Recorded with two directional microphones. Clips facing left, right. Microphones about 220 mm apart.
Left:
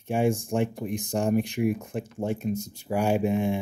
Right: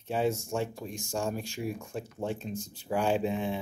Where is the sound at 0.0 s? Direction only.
15° left (ahead or behind).